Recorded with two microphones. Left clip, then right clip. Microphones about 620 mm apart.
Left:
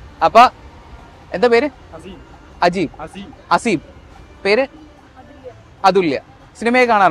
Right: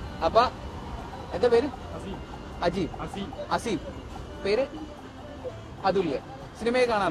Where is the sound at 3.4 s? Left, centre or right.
Left.